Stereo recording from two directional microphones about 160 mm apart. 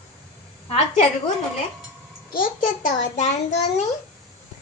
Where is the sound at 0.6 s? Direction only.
35° left (ahead or behind).